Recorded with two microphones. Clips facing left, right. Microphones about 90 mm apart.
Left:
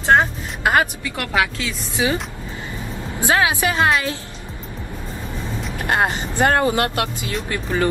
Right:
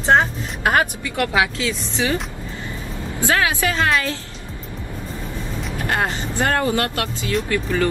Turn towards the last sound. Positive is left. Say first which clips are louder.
# right 2 dB
turn(degrees=30)  # may be behind; listen again after turning